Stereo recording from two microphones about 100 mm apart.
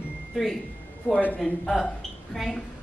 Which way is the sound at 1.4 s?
5° left (ahead or behind).